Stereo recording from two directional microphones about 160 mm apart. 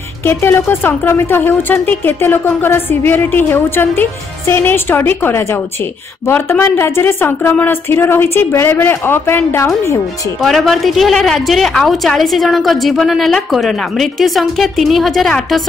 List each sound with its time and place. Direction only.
0.2 s speech: 15° left (ahead or behind)
10.4 s a woman's voice: centre (ahead or behind)